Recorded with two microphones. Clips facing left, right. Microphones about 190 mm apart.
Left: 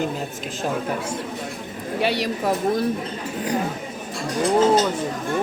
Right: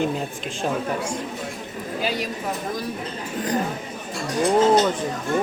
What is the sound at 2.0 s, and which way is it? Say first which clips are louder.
Speech: left 4 dB; 75° left (ahead or behind).